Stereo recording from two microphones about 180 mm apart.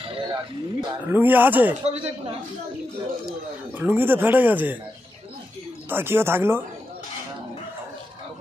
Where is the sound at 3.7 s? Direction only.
10° right (ahead or behind).